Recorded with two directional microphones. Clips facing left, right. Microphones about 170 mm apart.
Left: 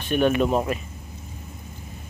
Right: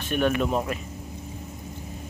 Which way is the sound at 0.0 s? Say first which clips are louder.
Left 3 dB; 25° left (ahead or behind).